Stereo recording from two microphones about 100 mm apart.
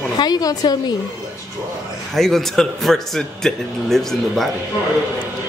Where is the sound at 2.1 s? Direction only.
5° left (ahead or behind).